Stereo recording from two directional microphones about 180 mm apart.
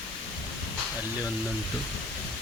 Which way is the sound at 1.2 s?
5° right (ahead or behind).